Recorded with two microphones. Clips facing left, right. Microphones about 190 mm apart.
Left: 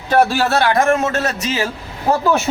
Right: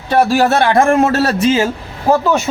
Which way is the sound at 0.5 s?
25° right (ahead or behind).